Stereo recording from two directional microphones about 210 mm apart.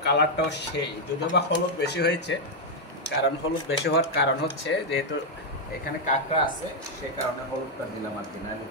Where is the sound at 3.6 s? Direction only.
55° left (ahead or behind).